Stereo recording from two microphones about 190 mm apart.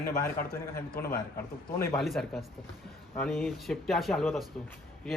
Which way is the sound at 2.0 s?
Centre (ahead or behind).